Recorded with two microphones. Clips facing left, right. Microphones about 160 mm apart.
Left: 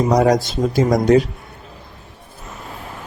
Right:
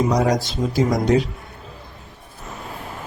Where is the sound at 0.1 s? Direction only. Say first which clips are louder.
Left 5 dB; 50° left (ahead or behind).